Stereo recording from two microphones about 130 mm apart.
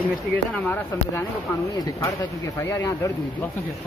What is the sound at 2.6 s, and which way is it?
Speech, 20° left (ahead or behind).